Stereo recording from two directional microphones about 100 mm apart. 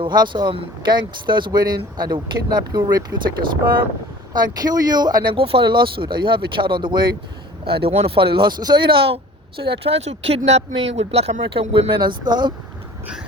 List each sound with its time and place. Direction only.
0.0 s speech: 45° right (ahead or behind)
4.4 s speech: 40° right (ahead or behind)
5.3 s speech: 70° right (ahead or behind)
7.8 s speech: 80° right; by 11.9 s 65° right (ahead or behind)
11.9 s speech: 45° right (ahead or behind)